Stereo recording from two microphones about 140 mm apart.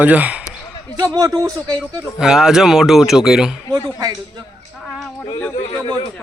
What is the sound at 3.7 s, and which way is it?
Speech, 25° right (ahead or behind).